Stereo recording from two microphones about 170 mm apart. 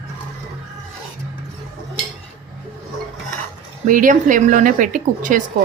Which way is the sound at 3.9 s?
50° right (ahead or behind).